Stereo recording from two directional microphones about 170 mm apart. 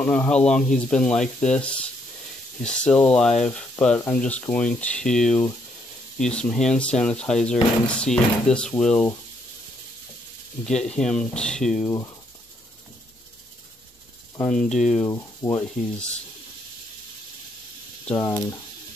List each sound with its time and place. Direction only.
0.0 s speech: 10° left (ahead or behind)
10.6 s speech: 5° left (ahead or behind)
14.3 s speech: 10° left (ahead or behind)
15.0 s speech: 15° left (ahead or behind)
18.0 s speech: 15° left (ahead or behind)